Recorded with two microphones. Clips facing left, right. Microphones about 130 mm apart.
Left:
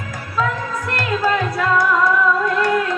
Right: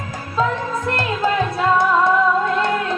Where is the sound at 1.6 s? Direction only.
25° right (ahead or behind).